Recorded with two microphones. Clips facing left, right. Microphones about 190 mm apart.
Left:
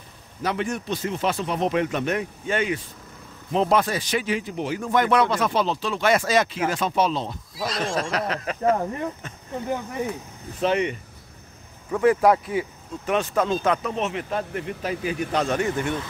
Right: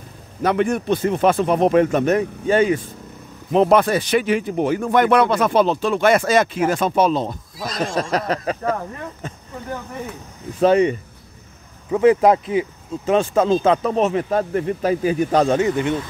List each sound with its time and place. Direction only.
0.4 s speech: 55° right (ahead or behind); by 2.8 s 35° right (ahead or behind)
3.5 s speech: 60° right (ahead or behind); by 8.5 s 40° right (ahead or behind)
8.6 s speech: 20° left (ahead or behind)
11.9 s speech: 20° right (ahead or behind); by 15.5 s 40° right (ahead or behind)
15.5 s speech: 20° right (ahead or behind)